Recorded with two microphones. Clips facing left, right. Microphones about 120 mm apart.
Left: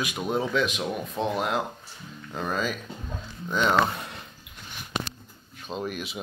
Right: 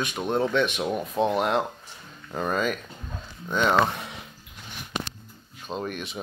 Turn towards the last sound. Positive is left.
turn(degrees=5)  # may be behind; listen again after turning